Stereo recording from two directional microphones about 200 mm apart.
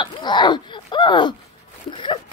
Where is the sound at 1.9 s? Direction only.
25° left (ahead or behind).